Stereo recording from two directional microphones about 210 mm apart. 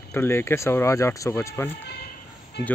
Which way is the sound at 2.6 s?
50° left (ahead or behind).